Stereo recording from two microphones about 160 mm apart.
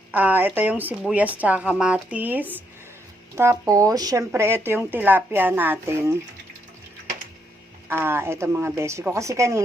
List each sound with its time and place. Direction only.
0.1 s a woman's voice: 10° right (ahead or behind)
7.9 s a woman's voice: 15° right (ahead or behind)